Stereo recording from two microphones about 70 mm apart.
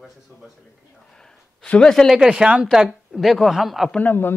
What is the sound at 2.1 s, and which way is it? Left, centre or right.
A man's voice, centre.